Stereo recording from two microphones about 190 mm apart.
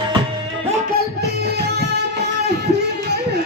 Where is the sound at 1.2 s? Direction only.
60° right (ahead or behind).